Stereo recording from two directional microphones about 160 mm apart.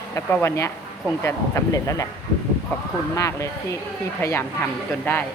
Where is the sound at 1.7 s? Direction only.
20° left (ahead or behind).